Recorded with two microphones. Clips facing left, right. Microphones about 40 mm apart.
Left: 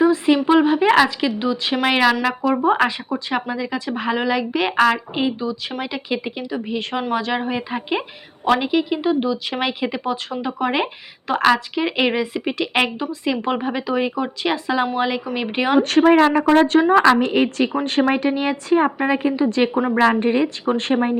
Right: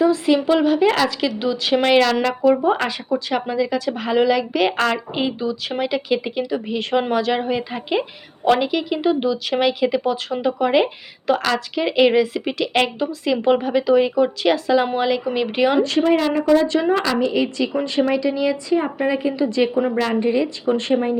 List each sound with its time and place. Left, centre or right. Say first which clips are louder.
0.0 s a woman's voice: left 1 dB; centre
2.2 s a woman's voice: right 2 dB; centre
9.5 s a woman's voice: right 5 dB; centre
15.8 s a woman's voice: left 3 dB; left
16.2 s a woman's voice: left 2 dB; left
17.2 s a woman's voice: left 2 dB; left